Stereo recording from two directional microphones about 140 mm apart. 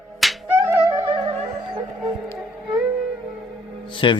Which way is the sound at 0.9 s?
30° right (ahead or behind).